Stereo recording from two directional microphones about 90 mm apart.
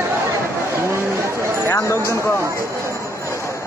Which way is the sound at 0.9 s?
30° right (ahead or behind).